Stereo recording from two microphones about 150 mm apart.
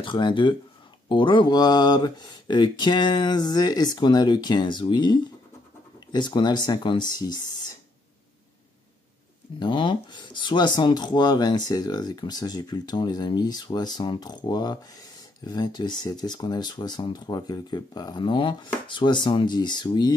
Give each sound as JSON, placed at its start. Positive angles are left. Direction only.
{"t": 0.0, "sound": "speech", "side_deg": 30}
{"t": 9.6, "sound": "speech", "side_deg": 30}